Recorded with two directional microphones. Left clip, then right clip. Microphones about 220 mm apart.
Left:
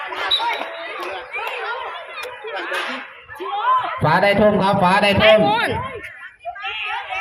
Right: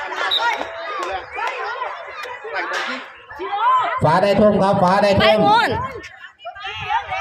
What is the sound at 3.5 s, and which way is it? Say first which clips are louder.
Snicker: right 2 dB; 30° right (ahead or behind).